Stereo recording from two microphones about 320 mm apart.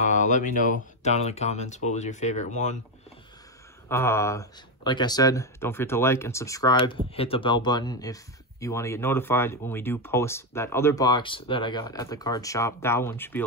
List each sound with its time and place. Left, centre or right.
0.1 s speech: left
3.9 s speech: centre